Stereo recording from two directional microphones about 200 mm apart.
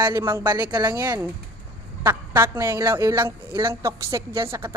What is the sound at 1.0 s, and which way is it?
A woman's voice, 10° right (ahead or behind).